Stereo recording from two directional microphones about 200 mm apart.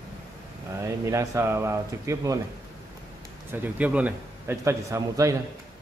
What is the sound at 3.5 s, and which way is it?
A man's voice, 10° right (ahead or behind).